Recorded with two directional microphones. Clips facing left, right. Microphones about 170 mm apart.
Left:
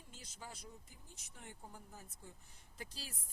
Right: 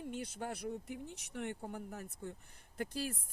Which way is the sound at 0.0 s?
65° right (ahead or behind).